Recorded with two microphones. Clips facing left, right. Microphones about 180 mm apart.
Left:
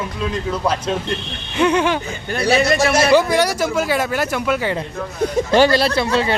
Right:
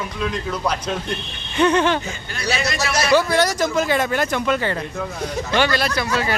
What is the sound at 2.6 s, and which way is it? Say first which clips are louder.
Speech: left 8 dB; 55° left (ahead or behind).